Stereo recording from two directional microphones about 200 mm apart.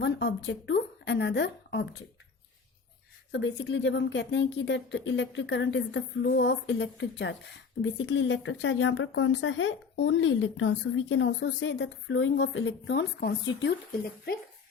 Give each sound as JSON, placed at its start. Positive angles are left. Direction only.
{"t": 0.0, "sound": "speech", "side_deg": 60}
{"t": 3.3, "sound": "speech", "side_deg": 65}